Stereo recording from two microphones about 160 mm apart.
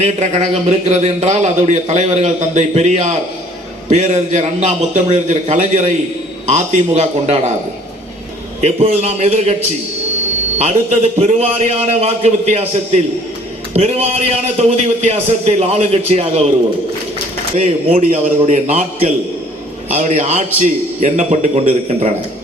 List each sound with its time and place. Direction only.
0.0 s speech: 45° right (ahead or behind)
8.6 s speech: 40° right (ahead or behind)
10.6 s a man's voice: 40° right (ahead or behind)
17.6 s speech: 45° right (ahead or behind)